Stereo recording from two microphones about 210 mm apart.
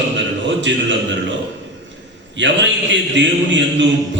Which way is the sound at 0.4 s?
60° right (ahead or behind).